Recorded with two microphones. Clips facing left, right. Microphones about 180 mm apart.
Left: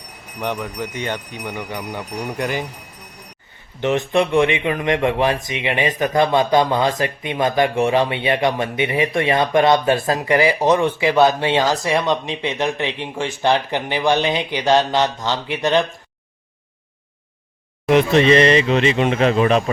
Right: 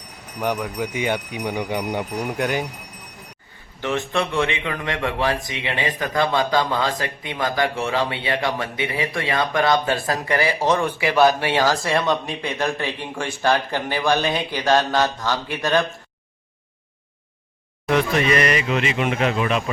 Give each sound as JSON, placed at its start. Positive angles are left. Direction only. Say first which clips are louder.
{"t": 0.3, "sound": "speech", "louder": "right 1 dB", "side_deg": -5}
{"t": 2.3, "sound": "speech", "louder": "even", "side_deg": 0}
{"t": 3.8, "sound": "a man's voice", "louder": "left 5 dB", "side_deg": 20}
{"t": 17.8, "sound": "speech", "louder": "left 6 dB", "side_deg": 25}